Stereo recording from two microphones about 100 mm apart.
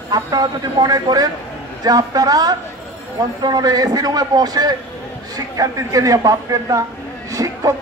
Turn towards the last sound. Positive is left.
turn(degrees=-35)  # may be behind; listen again after turning